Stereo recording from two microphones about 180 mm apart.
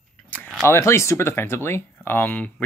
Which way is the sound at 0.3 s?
5° left (ahead or behind).